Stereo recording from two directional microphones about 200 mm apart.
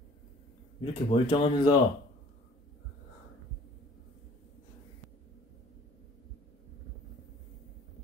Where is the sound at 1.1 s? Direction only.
25° left (ahead or behind).